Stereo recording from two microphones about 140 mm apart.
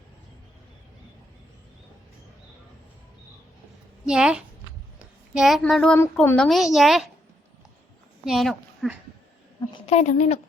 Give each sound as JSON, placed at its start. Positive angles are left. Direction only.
{"t": 4.0, "sound": "a woman's voice", "side_deg": -5}
{"t": 6.0, "sound": "a woman's voice", "side_deg": 15}
{"t": 6.3, "sound": "a woman's voice", "side_deg": 5}
{"t": 8.2, "sound": "a child's voice", "side_deg": 0}
{"t": 9.8, "sound": "a woman's voice", "side_deg": 55}